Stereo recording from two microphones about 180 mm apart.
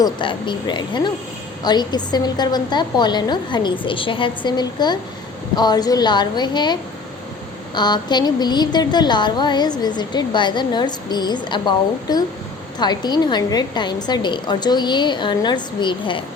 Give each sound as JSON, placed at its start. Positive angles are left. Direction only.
{"t": 0.0, "sound": "speech", "side_deg": 25}
{"t": 7.8, "sound": "speech", "side_deg": 25}